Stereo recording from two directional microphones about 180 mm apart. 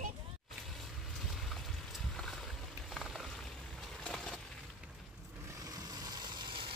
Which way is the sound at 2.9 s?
Centre (ahead or behind).